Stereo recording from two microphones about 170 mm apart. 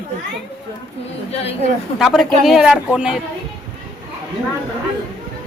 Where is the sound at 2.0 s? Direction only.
Centre (ahead or behind).